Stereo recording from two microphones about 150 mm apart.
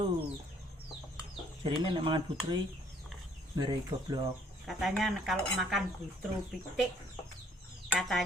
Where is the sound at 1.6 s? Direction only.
35° right (ahead or behind).